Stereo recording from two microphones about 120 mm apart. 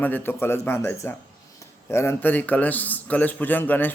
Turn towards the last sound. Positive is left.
turn(degrees=15)  # may be behind; listen again after turning